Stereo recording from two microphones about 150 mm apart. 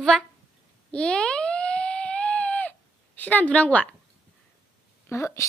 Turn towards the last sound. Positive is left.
turn(degrees=20)  # may be behind; listen again after turning